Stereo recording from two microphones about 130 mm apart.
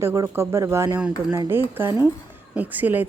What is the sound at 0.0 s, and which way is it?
A woman's voice, 20° right (ahead or behind).